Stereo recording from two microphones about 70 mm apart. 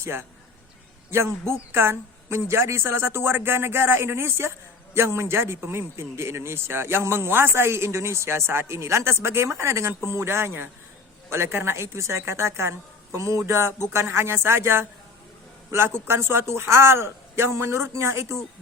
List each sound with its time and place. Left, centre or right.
0.0 s a man's voice: right